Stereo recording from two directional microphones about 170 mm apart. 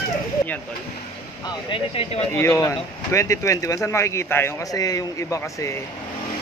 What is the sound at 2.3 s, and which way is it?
Speech, 15° left (ahead or behind).